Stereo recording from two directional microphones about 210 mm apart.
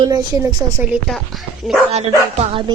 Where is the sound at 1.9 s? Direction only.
30° right (ahead or behind).